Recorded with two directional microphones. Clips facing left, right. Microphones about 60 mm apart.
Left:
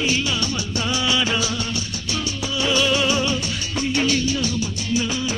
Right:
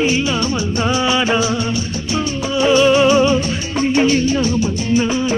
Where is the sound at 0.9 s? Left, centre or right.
Right.